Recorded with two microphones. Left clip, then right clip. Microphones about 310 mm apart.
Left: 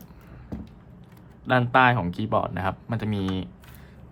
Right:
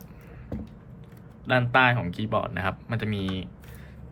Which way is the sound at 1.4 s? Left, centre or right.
Centre.